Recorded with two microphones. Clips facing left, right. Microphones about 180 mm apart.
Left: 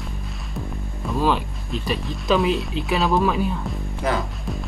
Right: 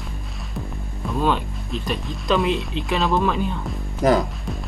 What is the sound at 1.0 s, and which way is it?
Speech, 5° left (ahead or behind).